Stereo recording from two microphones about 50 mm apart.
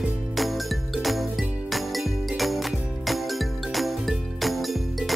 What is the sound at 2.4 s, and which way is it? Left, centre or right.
Music, centre.